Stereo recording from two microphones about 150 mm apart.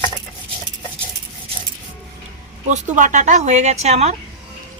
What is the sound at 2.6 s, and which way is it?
A woman's voice, 55° right (ahead or behind).